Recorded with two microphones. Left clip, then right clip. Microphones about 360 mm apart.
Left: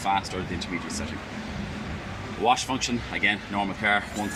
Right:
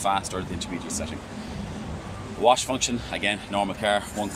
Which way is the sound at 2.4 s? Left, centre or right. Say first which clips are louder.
Right 3 dB; centre.